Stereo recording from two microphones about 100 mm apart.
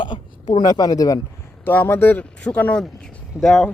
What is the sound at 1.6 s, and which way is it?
Speech, 20° left (ahead or behind).